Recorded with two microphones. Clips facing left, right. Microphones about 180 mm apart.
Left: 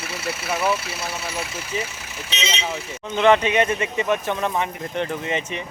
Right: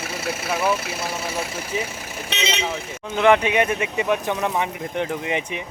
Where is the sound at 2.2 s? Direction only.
60° right (ahead or behind).